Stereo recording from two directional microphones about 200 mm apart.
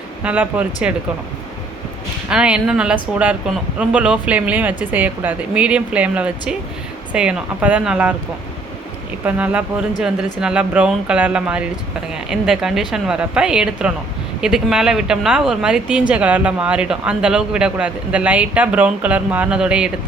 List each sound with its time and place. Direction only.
0.2 s speech: 5° right (ahead or behind)
2.3 s speech: 5° right (ahead or behind)
9.2 s speech: 5° right (ahead or behind)